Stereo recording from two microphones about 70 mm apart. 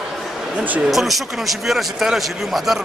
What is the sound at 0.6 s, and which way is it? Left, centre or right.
Speech, right.